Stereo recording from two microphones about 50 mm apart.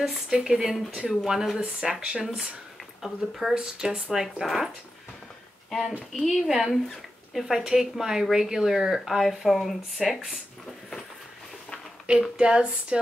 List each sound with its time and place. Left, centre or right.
0.0 s speech: centre
3.5 s speech: centre
5.7 s speech: centre
12.1 s speech: centre